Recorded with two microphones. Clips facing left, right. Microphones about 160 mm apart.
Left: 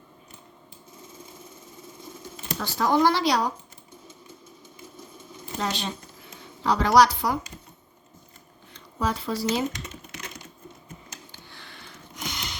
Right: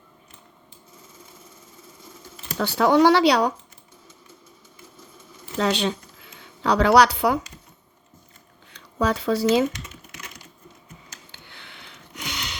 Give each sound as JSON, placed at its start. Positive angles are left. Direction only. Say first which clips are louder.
{"t": 2.0, "sound": "a sound", "louder": "left 4 dB", "side_deg": 20}
{"t": 2.6, "sound": "speech", "louder": "right 5 dB", "side_deg": -70}
{"t": 5.5, "sound": "speech", "louder": "right 7 dB", "side_deg": -80}
{"t": 9.0, "sound": "speech", "louder": "right 6 dB", "side_deg": -75}
{"t": 9.7, "sound": "typing", "louder": "left 1 dB", "side_deg": 25}
{"t": 11.3, "sound": "a sound", "louder": "even", "side_deg": -65}